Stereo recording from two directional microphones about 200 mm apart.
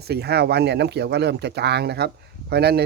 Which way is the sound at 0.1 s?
55° right (ahead or behind).